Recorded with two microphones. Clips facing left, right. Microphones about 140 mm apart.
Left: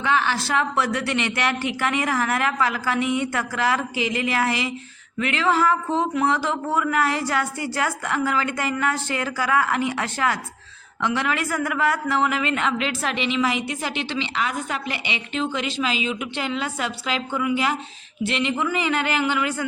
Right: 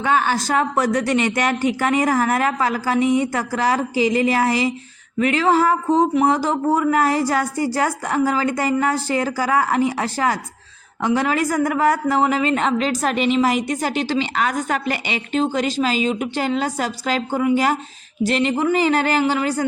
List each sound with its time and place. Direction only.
0.0 s a woman's voice: 45° right (ahead or behind)